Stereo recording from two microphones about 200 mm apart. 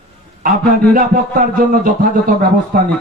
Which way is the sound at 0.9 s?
45° right (ahead or behind).